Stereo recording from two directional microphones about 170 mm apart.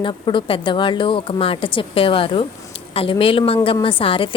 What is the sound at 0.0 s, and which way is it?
Speech, 30° left (ahead or behind).